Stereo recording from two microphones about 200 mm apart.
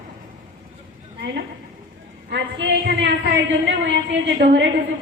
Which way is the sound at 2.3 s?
60° right (ahead or behind).